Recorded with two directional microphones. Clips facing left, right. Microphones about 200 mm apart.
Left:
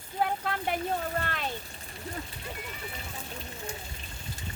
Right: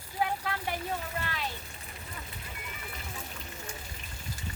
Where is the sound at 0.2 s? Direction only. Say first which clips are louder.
Left 2 dB; 50° left (ahead or behind).